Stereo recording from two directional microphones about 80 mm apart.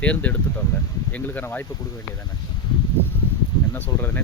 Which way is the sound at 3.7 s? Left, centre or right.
Left.